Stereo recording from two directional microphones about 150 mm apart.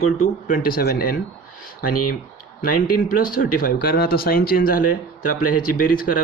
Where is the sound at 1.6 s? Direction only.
75° left (ahead or behind).